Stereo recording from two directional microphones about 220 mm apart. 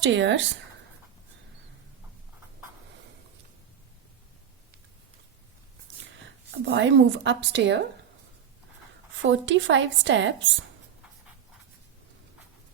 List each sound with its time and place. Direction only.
0.0 s a woman's voice: 55° right (ahead or behind)
6.7 s a woman's voice: 55° right (ahead or behind)
9.2 s a woman's voice: 60° right (ahead or behind)